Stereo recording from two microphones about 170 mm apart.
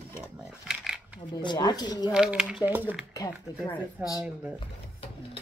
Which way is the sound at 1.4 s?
25° left (ahead or behind).